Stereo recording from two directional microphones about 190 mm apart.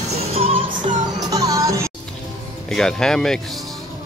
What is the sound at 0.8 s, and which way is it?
Music, 20° right (ahead or behind).